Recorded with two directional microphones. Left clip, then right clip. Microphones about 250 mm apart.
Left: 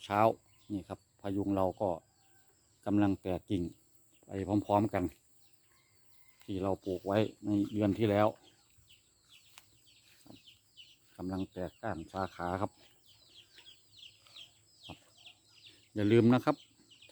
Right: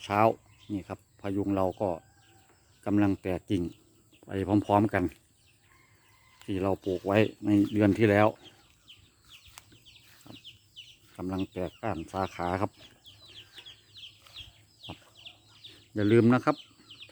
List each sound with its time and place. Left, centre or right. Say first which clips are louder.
0.0 s speech: right 4 dB; centre
6.4 s speech: right 5 dB; centre
11.2 s speech: right 5 dB; centre
14.3 s chicken: right 6 dB; centre
16.0 s speech: right 4 dB; centre